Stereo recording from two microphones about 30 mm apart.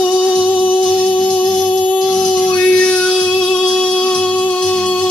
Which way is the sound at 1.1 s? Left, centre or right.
Left.